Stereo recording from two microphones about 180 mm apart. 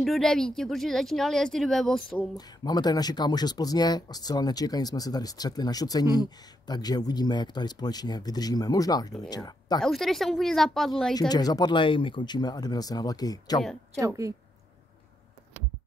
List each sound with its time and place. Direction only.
0.0 s speech: centre (ahead or behind)
2.3 s speech: 20° left (ahead or behind)
9.8 s speech: centre (ahead or behind)
11.1 s speech: 20° left (ahead or behind)
13.9 s speech: 15° right (ahead or behind)